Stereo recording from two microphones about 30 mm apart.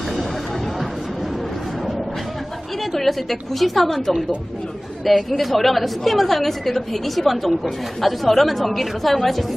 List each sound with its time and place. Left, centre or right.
2.9 s a woman's voice: centre
5.0 s a woman's voice: centre